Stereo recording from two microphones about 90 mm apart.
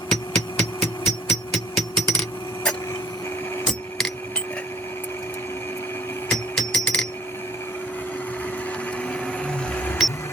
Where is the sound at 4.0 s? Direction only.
5° left (ahead or behind).